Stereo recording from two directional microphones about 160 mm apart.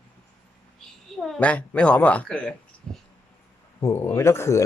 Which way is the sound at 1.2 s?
5° left (ahead or behind).